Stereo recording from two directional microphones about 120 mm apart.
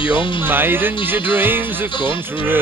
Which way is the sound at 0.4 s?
20° right (ahead or behind).